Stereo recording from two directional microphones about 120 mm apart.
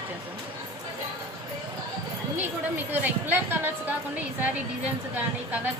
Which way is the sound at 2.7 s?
15° right (ahead or behind).